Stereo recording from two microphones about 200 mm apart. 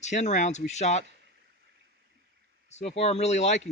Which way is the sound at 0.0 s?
35° left (ahead or behind).